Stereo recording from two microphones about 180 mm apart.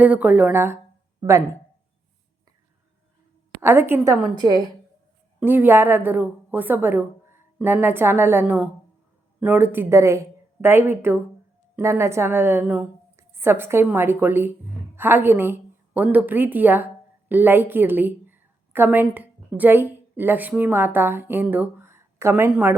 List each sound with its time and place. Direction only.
0.0 s a woman's voice: 10° right (ahead or behind)
3.6 s a woman's voice: 10° right (ahead or behind)
5.4 s a woman's voice: 10° right (ahead or behind)